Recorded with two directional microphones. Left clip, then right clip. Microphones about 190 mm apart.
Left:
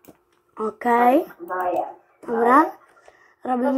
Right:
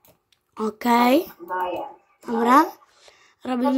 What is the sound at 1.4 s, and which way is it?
Speech, 30° right (ahead or behind).